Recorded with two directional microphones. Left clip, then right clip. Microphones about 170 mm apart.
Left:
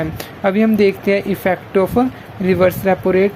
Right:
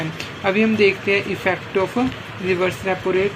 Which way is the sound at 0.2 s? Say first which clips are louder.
Left 2 dB; 80° left.